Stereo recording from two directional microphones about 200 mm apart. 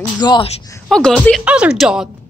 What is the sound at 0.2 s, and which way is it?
Speech, 20° left (ahead or behind).